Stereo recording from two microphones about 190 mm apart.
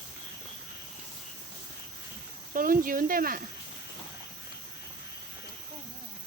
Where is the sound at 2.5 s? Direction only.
45° right (ahead or behind).